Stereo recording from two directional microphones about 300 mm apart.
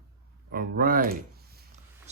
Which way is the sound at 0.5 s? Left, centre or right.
Right.